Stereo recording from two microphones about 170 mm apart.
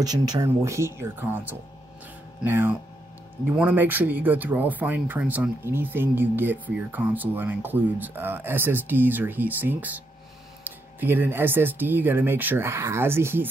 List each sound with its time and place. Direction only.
0.0 s speech: 25° right (ahead or behind)